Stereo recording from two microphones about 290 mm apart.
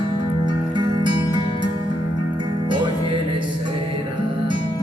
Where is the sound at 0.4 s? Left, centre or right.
Centre.